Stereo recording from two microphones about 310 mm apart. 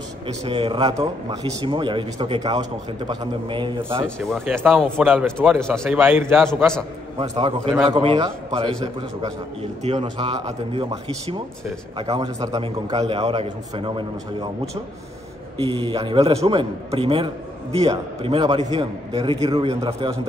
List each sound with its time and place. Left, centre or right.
0.5 s a man's voice: centre
4.2 s speech: centre
7.2 s a man's voice: centre
15.6 s a man's voice: centre